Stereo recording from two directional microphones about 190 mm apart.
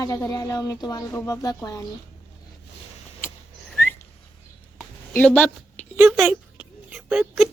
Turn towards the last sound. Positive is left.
turn(degrees=-5)  # may be behind; listen again after turning